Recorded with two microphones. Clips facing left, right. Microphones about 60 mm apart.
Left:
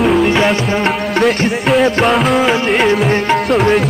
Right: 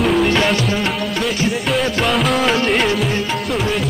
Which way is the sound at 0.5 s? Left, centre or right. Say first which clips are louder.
Left 3 dB; left.